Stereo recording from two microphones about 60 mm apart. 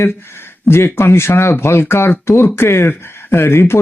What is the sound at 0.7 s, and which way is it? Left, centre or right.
Speech, left.